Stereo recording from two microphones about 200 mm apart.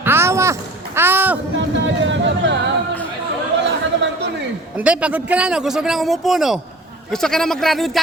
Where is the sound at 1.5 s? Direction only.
65° right (ahead or behind).